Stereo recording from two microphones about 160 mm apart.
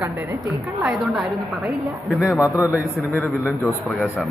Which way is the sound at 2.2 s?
15° left (ahead or behind).